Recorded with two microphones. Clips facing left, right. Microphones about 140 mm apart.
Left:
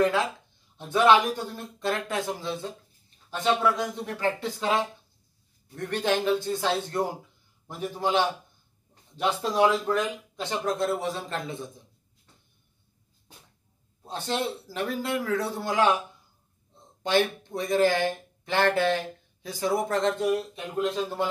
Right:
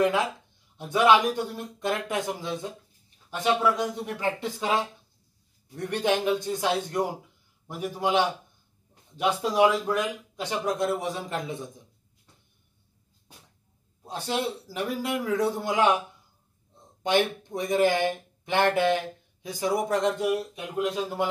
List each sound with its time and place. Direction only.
0.0 s speech: 20° right (ahead or behind)
14.0 s speech: 10° right (ahead or behind)